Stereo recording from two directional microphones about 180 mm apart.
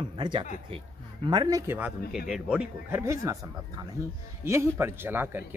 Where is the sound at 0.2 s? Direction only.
25° right (ahead or behind).